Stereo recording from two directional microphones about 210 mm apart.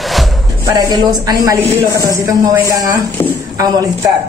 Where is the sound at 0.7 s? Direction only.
20° right (ahead or behind).